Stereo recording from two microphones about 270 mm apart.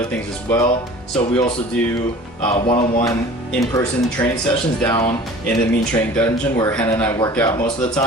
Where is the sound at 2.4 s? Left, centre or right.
Left.